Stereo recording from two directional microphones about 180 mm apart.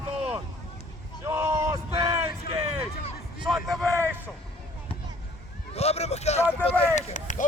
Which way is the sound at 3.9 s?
10° right (ahead or behind).